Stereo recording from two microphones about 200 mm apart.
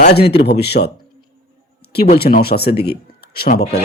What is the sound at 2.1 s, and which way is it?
Speech, 50° left (ahead or behind).